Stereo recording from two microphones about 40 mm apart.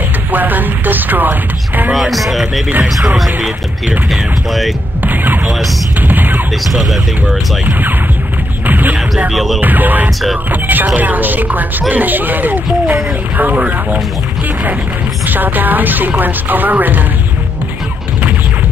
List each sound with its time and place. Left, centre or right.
0.3 s chopping: right
2.0 s speech: centre
4.1 s speech: centre
5.0 s speech: right
5.9 s music: right
6.7 s speech: centre
8.6 s music: right
9.3 s speech: centre
9.6 s speech: right
15.2 s speech: right